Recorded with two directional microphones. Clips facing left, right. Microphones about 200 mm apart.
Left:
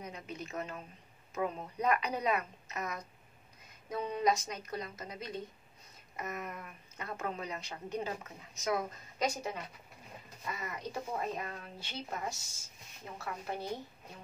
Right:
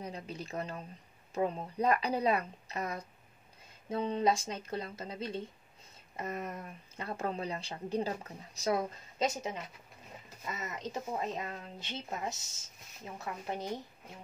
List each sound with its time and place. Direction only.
0.0 s a woman's voice: 30° right (ahead or behind)